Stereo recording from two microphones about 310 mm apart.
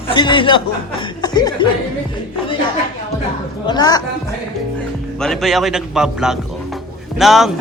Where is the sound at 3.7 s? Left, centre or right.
Centre.